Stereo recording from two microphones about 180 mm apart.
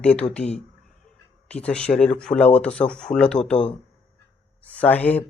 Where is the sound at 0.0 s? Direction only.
5° left (ahead or behind).